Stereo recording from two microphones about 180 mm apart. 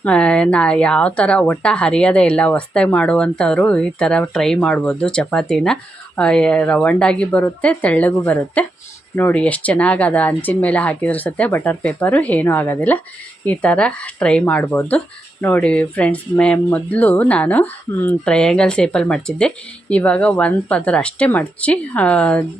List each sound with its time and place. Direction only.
0.0 s speech: 5° left (ahead or behind)